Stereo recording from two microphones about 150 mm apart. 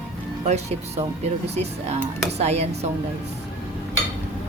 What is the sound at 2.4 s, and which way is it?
Music, 45° right (ahead or behind).